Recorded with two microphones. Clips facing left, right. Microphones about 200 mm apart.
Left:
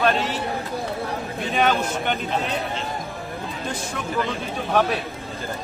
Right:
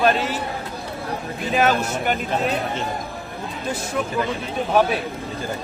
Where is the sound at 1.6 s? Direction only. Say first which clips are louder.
Right 1 dB; 5° right (ahead or behind).